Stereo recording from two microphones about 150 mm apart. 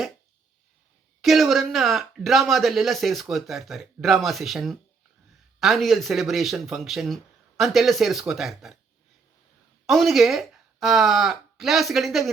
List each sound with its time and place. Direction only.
1.2 s speech: centre (ahead or behind)
9.8 s speech: centre (ahead or behind)